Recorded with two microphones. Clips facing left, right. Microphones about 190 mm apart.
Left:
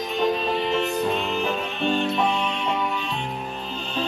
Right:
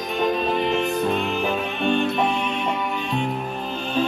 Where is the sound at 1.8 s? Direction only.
55° right (ahead or behind).